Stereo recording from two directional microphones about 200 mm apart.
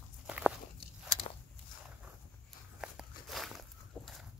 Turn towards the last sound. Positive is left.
turn(degrees=0)  # may be behind; listen again after turning